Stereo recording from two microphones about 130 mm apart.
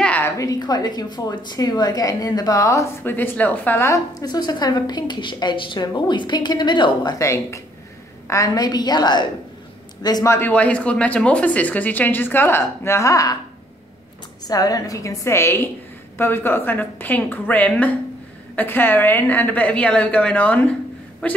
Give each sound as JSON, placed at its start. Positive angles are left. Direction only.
{"t": 0.0, "sound": "a sound", "side_deg": 10}
{"t": 0.4, "sound": "a woman's voice", "side_deg": 30}
{"t": 7.2, "sound": "a woman's voice", "side_deg": 20}
{"t": 14.5, "sound": "a woman's voice", "side_deg": 30}